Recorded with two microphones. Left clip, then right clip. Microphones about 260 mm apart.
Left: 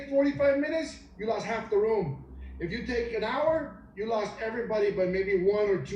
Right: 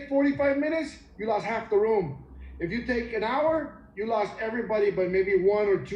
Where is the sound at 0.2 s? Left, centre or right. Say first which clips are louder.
Even; right.